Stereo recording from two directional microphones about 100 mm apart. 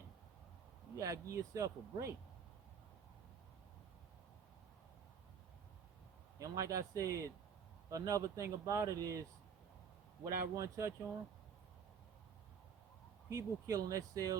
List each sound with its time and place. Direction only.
0.9 s speech: 35° right (ahead or behind)
6.4 s speech: 35° right (ahead or behind)
10.2 s speech: 30° right (ahead or behind)
13.3 s speech: 35° right (ahead or behind)